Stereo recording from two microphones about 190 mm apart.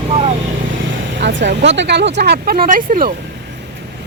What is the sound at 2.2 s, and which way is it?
Speech, 55° right (ahead or behind).